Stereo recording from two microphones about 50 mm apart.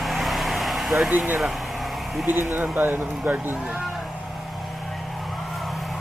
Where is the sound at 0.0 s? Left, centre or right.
Centre.